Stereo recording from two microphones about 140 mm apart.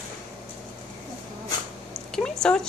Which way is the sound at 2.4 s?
5° left (ahead or behind).